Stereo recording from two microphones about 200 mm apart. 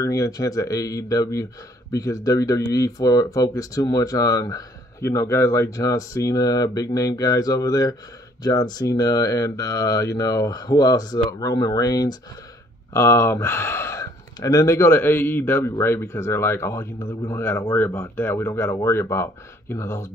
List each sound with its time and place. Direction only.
0.0 s speech: 15° left (ahead or behind)